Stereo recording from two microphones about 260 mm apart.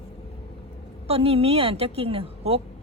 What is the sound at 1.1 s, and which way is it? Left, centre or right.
A woman's voice, right.